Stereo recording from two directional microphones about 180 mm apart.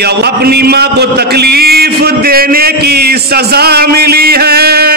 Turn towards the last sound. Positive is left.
turn(degrees=-60)  # may be behind; listen again after turning